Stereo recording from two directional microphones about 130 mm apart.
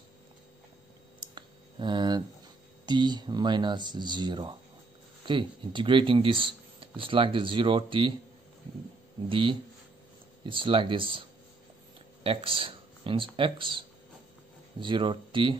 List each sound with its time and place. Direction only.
1.3 s speech: 35° right (ahead or behind)
9.3 s speech: 40° right (ahead or behind)